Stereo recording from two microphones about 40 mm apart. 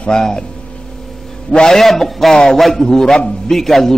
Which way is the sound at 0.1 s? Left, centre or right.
Centre.